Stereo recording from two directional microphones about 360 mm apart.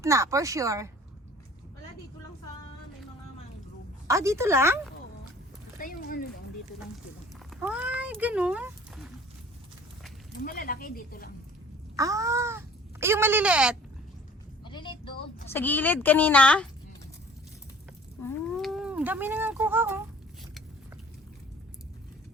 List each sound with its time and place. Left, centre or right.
0.0 s speech: centre
4.0 s speech: centre
5.8 s speech: left
7.5 s speech: centre
10.4 s speech: left
11.9 s speech: centre
14.6 s a sound: centre
15.4 s speech: centre
18.2 s speech: centre